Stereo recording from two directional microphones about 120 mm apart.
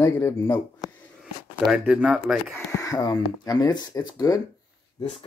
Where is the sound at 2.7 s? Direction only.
30° left (ahead or behind).